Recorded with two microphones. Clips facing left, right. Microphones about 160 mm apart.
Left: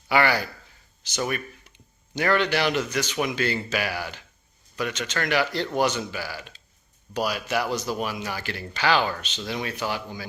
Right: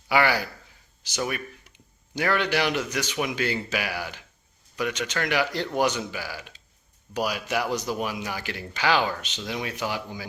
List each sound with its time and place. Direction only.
0.1 s speech: 10° right (ahead or behind)